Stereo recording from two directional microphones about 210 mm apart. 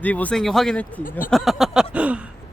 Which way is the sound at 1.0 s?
40° left (ahead or behind).